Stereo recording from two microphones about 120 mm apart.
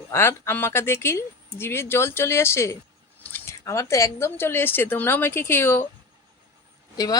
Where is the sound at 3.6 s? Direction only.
25° left (ahead or behind).